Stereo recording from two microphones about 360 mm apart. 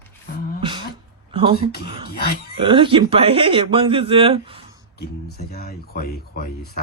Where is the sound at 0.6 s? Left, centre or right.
Centre.